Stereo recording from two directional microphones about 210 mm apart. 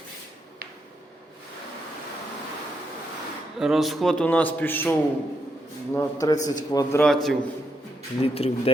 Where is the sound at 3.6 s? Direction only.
Centre (ahead or behind); by 7.0 s 15° left (ahead or behind).